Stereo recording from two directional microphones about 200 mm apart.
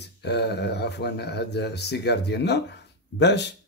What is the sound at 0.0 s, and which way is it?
Speech, 55° left (ahead or behind).